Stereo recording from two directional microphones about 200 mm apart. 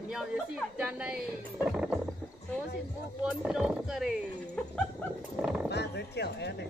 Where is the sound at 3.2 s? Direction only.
5° right (ahead or behind).